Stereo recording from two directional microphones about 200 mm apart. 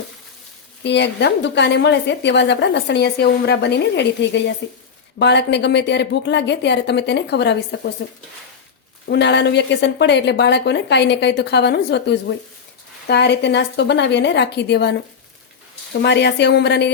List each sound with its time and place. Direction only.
0.9 s a woman's voice: 60° left (ahead or behind)
9.0 s a woman's voice: 60° left (ahead or behind)